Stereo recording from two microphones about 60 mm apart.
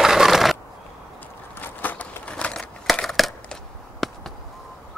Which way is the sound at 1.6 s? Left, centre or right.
Left.